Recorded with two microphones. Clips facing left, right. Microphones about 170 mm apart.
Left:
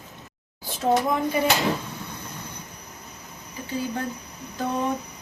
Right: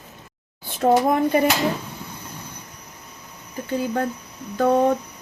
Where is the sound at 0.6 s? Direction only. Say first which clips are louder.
Right 4 dB; 55° right (ahead or behind).